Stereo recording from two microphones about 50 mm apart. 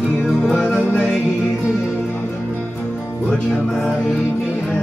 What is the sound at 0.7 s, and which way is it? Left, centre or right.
Music, left.